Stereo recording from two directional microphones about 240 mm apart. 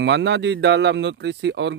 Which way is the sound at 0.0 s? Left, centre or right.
Right.